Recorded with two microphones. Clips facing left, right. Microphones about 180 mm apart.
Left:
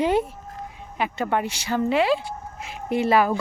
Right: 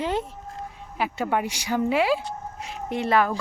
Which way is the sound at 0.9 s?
5° right (ahead or behind).